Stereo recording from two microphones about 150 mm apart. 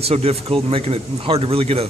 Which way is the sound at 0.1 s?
40° right (ahead or behind).